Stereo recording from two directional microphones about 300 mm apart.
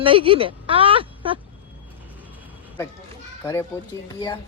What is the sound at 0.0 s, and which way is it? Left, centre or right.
Speech, centre.